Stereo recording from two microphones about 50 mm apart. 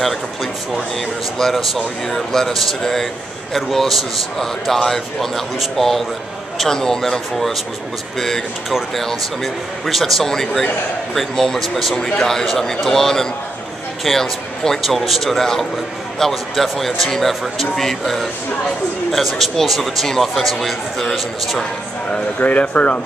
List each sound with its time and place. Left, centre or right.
0.0 s a man's voice: centre
8.9 s a man's voice: centre
22.4 s speech: left